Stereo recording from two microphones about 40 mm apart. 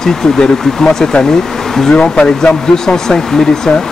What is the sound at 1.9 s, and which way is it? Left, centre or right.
Speech, left.